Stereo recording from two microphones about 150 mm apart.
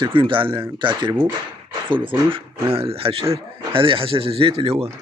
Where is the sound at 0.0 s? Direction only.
35° right (ahead or behind).